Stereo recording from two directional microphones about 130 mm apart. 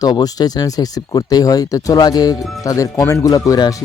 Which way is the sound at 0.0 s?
30° left (ahead or behind).